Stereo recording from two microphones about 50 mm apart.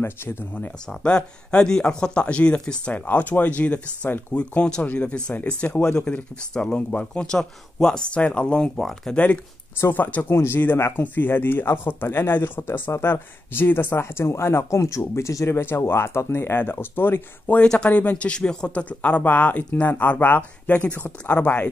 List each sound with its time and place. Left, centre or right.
0.0 s speech: left
0.8 s speech: centre
2.9 s speech: left
6.1 s speech: centre
8.1 s speech: left
9.9 s speech: left
10.3 s speech: left
11.0 s speech: left
15.7 s speech: left
16.5 s speech: left
17.8 s speech: left